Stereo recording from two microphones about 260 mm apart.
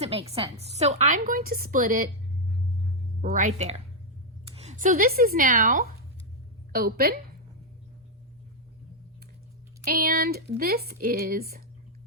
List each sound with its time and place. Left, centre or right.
0.0 s a woman's voice: right
3.2 s a woman's voice: right
6.7 s speech: right
9.8 s speech: right